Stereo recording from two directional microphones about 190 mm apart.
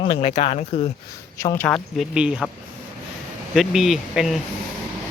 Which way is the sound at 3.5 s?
Centre (ahead or behind).